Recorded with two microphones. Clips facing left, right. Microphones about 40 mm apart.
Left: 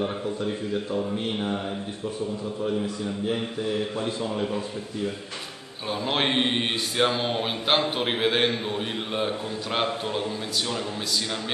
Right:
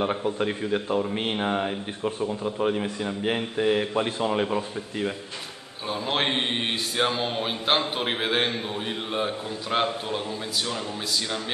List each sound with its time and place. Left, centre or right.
0.0 s a man's voice: right
5.9 s a man's voice: centre